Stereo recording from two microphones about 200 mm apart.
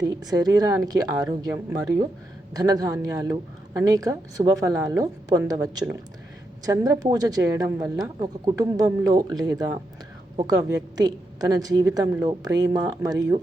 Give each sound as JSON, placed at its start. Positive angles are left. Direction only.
{"t": 0.0, "sound": "a woman's voice", "side_deg": -20}
{"t": 2.5, "sound": "a woman's voice", "side_deg": -20}